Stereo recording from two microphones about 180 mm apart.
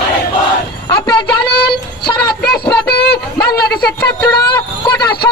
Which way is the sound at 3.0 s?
65° left (ahead or behind).